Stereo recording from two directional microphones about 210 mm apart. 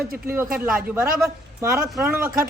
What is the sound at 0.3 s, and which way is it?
Speech, 5° right (ahead or behind).